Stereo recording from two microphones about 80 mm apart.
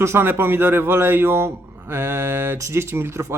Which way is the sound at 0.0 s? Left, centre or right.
Right.